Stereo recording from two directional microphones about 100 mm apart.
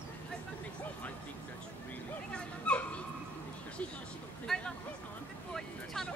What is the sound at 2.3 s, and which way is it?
Dog, 10° left (ahead or behind).